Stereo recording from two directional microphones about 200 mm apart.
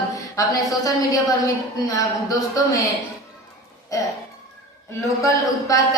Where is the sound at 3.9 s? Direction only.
15° left (ahead or behind).